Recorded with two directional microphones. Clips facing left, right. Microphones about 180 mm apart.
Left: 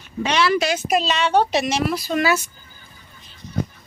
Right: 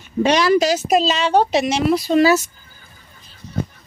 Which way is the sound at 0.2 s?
40° right (ahead or behind).